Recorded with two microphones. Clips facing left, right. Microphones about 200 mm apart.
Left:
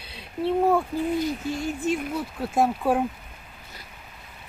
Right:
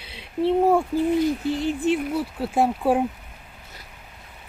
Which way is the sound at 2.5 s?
15° right (ahead or behind).